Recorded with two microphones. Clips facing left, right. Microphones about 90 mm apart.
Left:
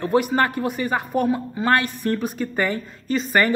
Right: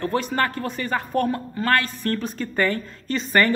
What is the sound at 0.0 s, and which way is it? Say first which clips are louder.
Speech: left 4 dB; 15° left (ahead or behind).